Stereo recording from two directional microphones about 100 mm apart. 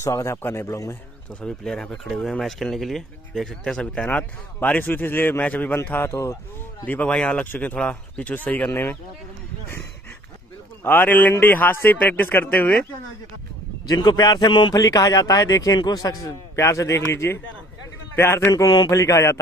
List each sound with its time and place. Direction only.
0.0 s a man's voice: 30° left (ahead or behind)
1.4 s a man's voice: 5° left (ahead or behind); by 8.9 s 20° left (ahead or behind)
10.8 s a man's voice: 20° left (ahead or behind)
13.8 s a man's voice: 45° left (ahead or behind)
14.7 s a man's voice: 35° left (ahead or behind)